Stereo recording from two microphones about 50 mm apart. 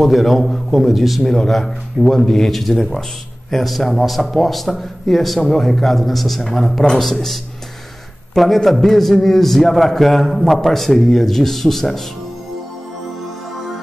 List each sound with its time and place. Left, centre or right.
0.0 s a man's voice: centre
8.6 s a man's voice: centre